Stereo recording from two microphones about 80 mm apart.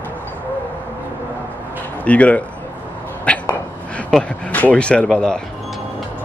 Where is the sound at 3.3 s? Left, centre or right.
Centre.